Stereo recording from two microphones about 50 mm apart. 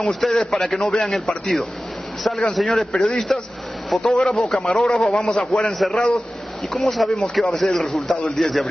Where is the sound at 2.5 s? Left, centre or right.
Centre.